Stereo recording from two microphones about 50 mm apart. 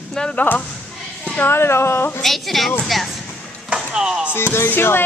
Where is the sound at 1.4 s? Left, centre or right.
Left.